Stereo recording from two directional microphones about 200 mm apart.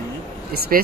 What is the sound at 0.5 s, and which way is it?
Speech, 50° right (ahead or behind).